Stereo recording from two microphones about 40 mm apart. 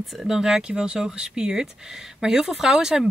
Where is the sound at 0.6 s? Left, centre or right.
Right.